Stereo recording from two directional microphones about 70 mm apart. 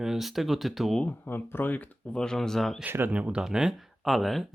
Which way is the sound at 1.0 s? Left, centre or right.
Left.